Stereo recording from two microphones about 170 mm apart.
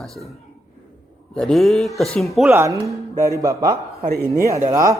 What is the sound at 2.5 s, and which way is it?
A man's voice, 15° right (ahead or behind).